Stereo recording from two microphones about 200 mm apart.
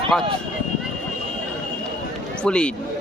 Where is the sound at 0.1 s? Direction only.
Centre (ahead or behind).